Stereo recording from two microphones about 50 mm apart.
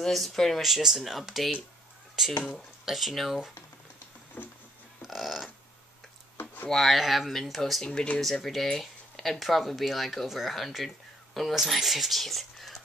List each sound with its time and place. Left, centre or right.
0.0 s speech: centre
4.4 s a sound: left
5.0 s a sound: centre
6.7 s speech: centre
7.8 s speech: centre
8.2 s speech: centre